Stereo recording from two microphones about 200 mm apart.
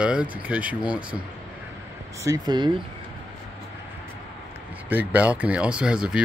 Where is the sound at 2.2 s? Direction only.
20° right (ahead or behind).